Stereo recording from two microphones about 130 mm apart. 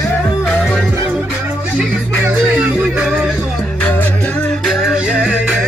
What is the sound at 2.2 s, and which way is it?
Music, 10° right (ahead or behind).